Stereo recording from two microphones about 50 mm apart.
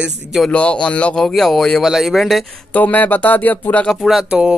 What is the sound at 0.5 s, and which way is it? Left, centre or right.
Speech, left.